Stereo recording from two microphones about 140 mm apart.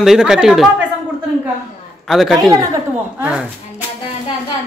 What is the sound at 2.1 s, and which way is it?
A man's voice, centre (ahead or behind).